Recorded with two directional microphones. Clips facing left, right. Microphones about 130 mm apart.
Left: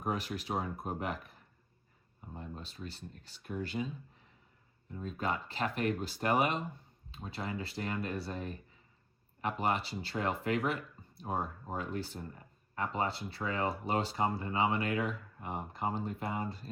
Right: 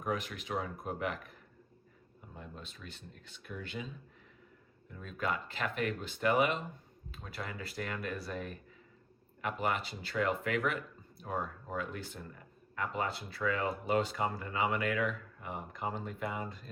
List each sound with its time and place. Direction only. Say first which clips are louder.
0.0 s speech: left 1 dB; 35° left (ahead or behind)
2.3 s speech: left 3 dB; 35° left (ahead or behind)
4.9 s speech: left 1 dB; 30° left (ahead or behind)
7.1 s speech: left 4 dB; 25° left (ahead or behind)